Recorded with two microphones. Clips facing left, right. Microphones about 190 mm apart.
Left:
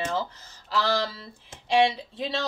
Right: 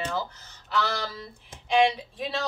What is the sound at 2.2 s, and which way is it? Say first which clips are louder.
Speech: left 2 dB; 25° left (ahead or behind).